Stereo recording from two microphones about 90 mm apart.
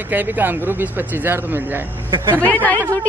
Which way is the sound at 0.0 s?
20° right (ahead or behind).